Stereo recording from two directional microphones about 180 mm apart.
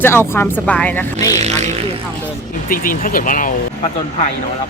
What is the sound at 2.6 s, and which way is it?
Speech, 50° left (ahead or behind).